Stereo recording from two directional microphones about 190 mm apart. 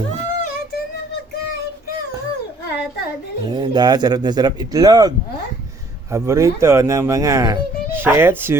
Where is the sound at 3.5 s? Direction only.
20° right (ahead or behind).